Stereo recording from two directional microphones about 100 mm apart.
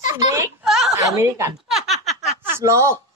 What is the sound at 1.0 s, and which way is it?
Speech, 30° right (ahead or behind).